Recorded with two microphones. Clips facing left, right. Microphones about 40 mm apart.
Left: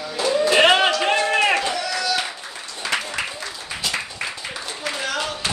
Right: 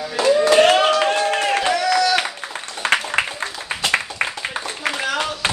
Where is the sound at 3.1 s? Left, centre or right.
Right.